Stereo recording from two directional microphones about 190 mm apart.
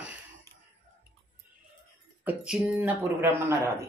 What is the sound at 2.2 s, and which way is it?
Speech, 5° right (ahead or behind).